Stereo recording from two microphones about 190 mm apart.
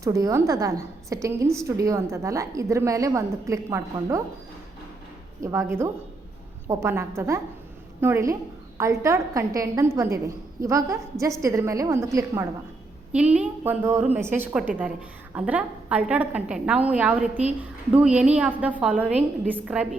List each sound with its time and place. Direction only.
0.0 s a woman's voice: 15° right (ahead or behind)
5.4 s a woman's voice: 15° right (ahead or behind)